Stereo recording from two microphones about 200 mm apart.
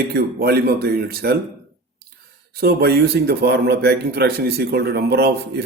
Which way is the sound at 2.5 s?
50° right (ahead or behind).